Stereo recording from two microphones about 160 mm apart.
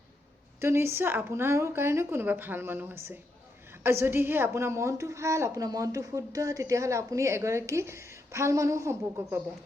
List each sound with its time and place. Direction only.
0.6 s a woman's voice: 15° right (ahead or behind)